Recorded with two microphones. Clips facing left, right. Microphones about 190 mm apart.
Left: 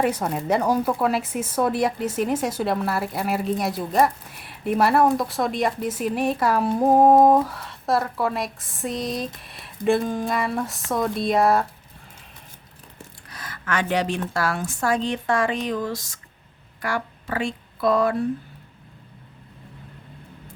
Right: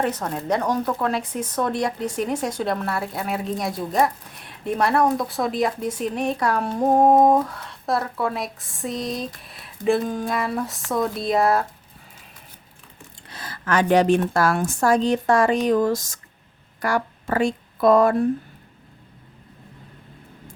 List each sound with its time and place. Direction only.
0.0 s speech: 10° left (ahead or behind)
13.3 s speech: 30° right (ahead or behind); by 18.3 s 45° right (ahead or behind)